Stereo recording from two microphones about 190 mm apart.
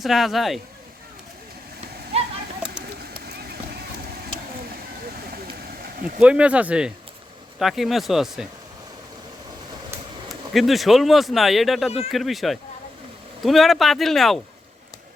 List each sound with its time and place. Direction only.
0.0 s speech: centre (ahead or behind)
3.0 s run: 55° right (ahead or behind)
6.1 s speech: 5° right (ahead or behind)
10.2 s speech: centre (ahead or behind)